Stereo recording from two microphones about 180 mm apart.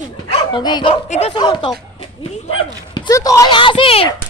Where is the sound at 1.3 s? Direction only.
25° left (ahead or behind).